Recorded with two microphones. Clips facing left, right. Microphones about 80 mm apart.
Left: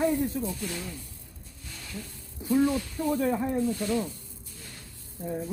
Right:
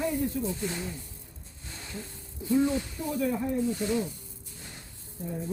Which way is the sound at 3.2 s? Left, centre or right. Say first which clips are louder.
Right 1 dB; left.